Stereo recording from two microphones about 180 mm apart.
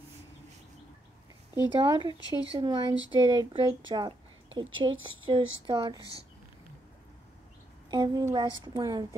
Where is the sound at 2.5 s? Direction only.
25° right (ahead or behind).